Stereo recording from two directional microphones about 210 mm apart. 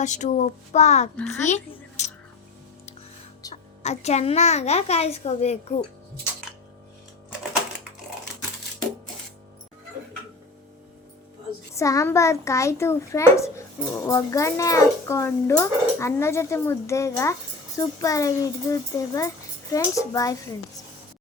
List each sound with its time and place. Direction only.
0.0 s a child's voice: 35° left (ahead or behind)
1.5 s music: 35° left (ahead or behind)
3.5 s a child's voice: 30° left (ahead or behind)
6.5 s a sound: 5° right (ahead or behind)
11.7 s a child's voice: 15° left (ahead or behind)